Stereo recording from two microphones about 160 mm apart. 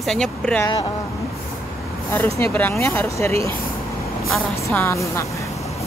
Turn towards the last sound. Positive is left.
turn(degrees=15)  # may be behind; listen again after turning